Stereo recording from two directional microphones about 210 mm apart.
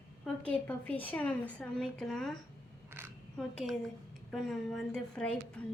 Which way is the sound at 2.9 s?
10° right (ahead or behind).